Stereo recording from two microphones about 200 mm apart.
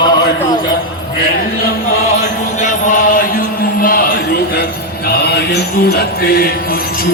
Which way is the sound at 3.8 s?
45° left (ahead or behind).